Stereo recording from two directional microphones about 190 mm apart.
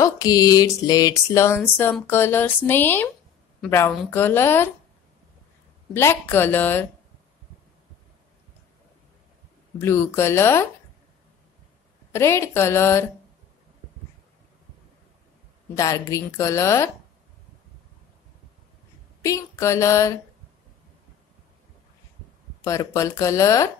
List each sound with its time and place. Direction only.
0.0 s a woman's voice: 20° left (ahead or behind)
5.9 s a woman's voice: 10° left (ahead or behind)
9.8 s a woman's voice: 15° left (ahead or behind)
12.1 s a woman's voice: 15° left (ahead or behind)
15.7 s a woman's voice: 15° left (ahead or behind)
19.2 s a woman's voice: 15° left (ahead or behind)
22.6 s a woman's voice: 15° left (ahead or behind)